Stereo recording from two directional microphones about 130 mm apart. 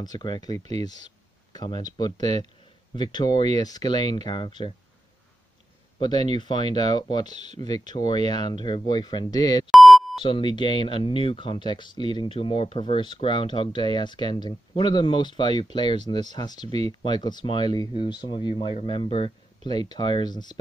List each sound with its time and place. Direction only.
0.0 s speech: 35° left (ahead or behind)
5.9 s speech: 35° left (ahead or behind)
9.7 s beep: centre (ahead or behind)
10.2 s speech: 40° left (ahead or behind)